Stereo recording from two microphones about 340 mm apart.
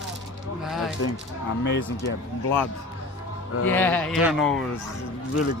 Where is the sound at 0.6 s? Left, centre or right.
Centre.